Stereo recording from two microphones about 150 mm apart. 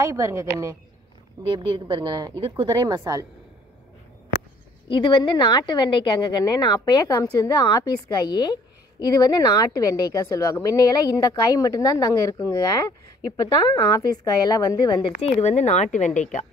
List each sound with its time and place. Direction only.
0.0 s speech: 20° right (ahead or behind)
1.4 s a woman's voice: 35° right (ahead or behind)
4.8 s a woman's voice: 35° left (ahead or behind)
13.8 s a woman's voice: 25° left (ahead or behind)
15.4 s speech: 50° left (ahead or behind)